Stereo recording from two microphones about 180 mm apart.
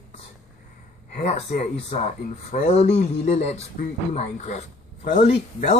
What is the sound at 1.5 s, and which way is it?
Speech, 40° left (ahead or behind).